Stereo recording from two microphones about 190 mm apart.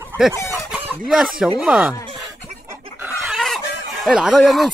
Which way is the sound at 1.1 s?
Centre (ahead or behind).